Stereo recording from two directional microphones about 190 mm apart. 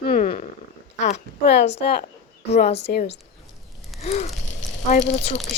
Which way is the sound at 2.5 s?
35° left (ahead or behind).